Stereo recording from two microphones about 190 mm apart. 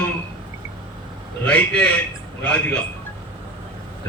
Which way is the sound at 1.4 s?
5° left (ahead or behind).